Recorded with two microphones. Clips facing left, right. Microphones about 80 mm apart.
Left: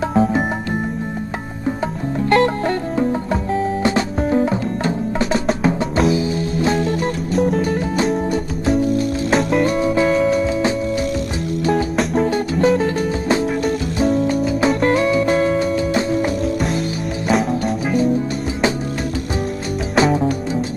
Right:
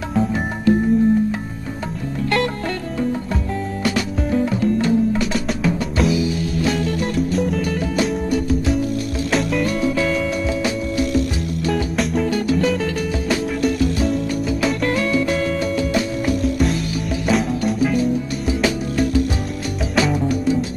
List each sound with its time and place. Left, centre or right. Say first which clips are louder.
2.2 s music: left 6 dB; left
3.8 s music: left 3 dB; left
11.7 s music: left 2 dB; centre
12.3 s music: left 2 dB; left
17.3 s music: left 2 dB; centre
20.0 s music: left 3 dB; left